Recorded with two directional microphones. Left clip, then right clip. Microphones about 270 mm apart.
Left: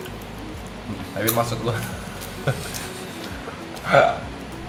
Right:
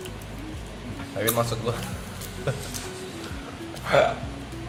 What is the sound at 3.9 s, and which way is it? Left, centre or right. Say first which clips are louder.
Speech: left 4 dB; right.